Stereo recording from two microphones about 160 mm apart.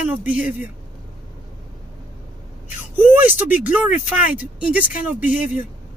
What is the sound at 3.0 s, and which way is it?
Speech, 10° right (ahead or behind).